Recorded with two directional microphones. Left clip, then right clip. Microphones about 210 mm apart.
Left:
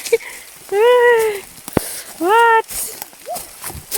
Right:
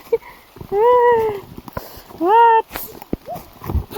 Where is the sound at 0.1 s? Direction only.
10° left (ahead or behind).